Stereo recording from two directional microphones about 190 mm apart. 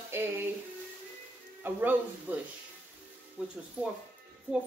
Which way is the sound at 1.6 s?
10° right (ahead or behind).